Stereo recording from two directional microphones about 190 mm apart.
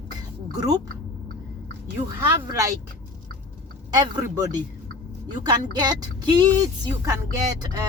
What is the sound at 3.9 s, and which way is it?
Speech, 20° right (ahead or behind).